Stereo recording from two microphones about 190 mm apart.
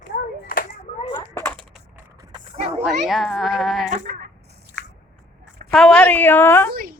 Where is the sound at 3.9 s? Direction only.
40° right (ahead or behind).